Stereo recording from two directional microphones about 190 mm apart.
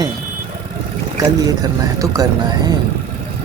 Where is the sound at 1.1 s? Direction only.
20° right (ahead or behind).